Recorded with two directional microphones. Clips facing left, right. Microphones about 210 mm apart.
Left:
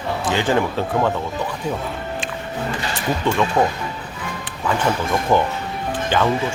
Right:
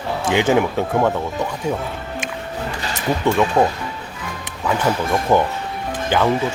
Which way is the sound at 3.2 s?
10° right (ahead or behind).